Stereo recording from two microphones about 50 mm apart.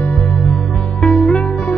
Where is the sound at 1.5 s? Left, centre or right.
Left.